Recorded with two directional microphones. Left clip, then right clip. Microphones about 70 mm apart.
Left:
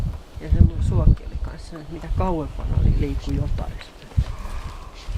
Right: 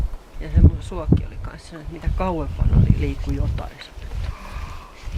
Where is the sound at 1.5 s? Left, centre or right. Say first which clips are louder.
Left 3 dB; right.